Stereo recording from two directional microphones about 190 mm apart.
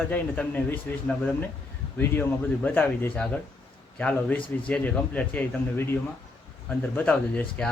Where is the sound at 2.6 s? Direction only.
10° left (ahead or behind).